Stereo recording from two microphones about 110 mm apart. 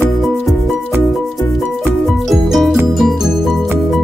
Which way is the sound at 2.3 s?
Centre (ahead or behind).